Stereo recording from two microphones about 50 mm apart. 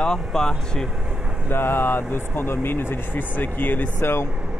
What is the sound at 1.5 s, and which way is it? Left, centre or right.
Speech, left.